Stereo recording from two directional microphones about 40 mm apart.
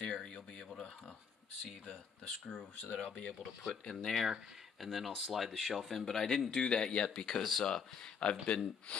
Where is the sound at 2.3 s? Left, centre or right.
Centre.